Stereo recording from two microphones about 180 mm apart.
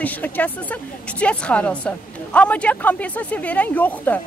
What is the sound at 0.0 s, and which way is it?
A woman's voice, 10° left (ahead or behind).